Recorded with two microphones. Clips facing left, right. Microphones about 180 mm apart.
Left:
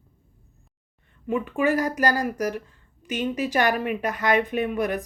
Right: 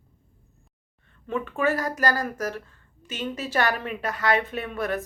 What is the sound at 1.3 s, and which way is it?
A woman's voice, 15° left (ahead or behind).